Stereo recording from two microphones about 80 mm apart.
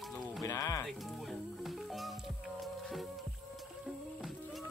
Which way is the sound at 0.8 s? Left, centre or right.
Centre.